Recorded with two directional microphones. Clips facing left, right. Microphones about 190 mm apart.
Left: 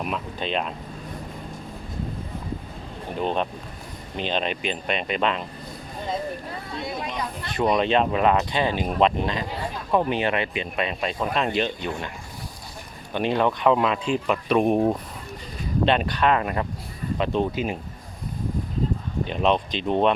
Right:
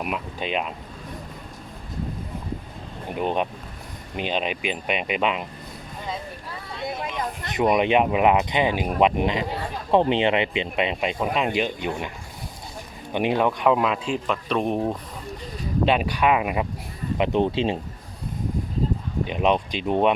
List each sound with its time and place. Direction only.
0.0 s speech: 10° right (ahead or behind)
3.2 s speech: 10° right (ahead or behind)
7.4 s speech: 20° right (ahead or behind)
13.1 s speech: 10° right (ahead or behind); by 14.9 s 10° left (ahead or behind)
15.9 s speech: 10° right (ahead or behind); by 17.7 s 25° right (ahead or behind)
19.2 s speech: 10° right (ahead or behind)